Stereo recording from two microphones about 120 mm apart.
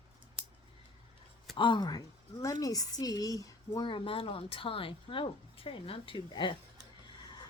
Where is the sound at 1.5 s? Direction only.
40° left (ahead or behind).